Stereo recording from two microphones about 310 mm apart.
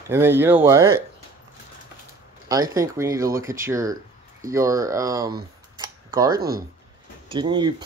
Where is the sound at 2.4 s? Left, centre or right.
Centre.